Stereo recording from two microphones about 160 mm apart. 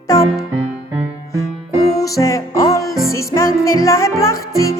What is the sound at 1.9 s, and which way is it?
Music, 20° left (ahead or behind).